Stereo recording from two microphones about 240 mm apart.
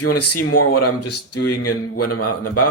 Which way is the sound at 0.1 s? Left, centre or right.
Left.